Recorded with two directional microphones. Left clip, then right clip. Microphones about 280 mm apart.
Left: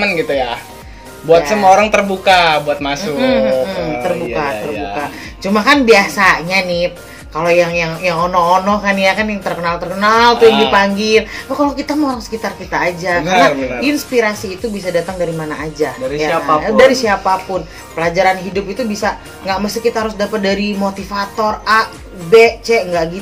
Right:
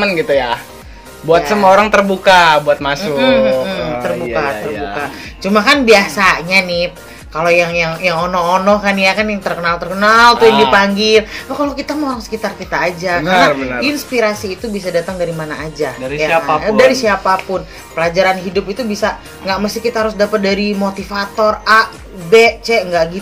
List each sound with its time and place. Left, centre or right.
0.0 s speech: right